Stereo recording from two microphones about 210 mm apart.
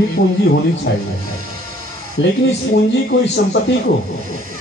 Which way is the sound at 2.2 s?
60° left (ahead or behind).